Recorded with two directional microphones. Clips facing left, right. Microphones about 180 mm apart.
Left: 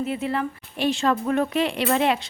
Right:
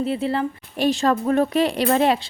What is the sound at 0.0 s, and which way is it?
Speech, 30° right (ahead or behind).